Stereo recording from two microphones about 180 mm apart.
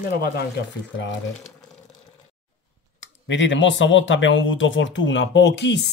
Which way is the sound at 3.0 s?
90° left.